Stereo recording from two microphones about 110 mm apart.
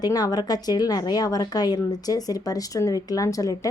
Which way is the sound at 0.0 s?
35° left (ahead or behind).